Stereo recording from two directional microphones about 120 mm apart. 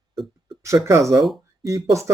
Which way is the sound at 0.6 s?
25° right (ahead or behind).